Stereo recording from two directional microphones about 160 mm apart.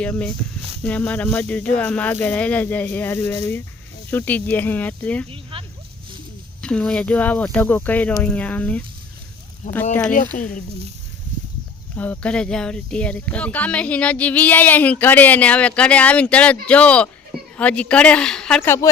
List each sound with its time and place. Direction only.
0.0 s speech: 5° left (ahead or behind)
5.3 s a sound: 35° right (ahead or behind)
6.6 s speech: 5° left (ahead or behind)
9.9 s speech: 10° left (ahead or behind)
11.9 s speech: 10° left (ahead or behind)